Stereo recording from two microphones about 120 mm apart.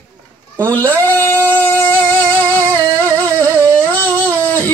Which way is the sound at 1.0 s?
15° left (ahead or behind).